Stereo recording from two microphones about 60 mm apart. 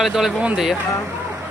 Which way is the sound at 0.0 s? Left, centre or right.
Centre.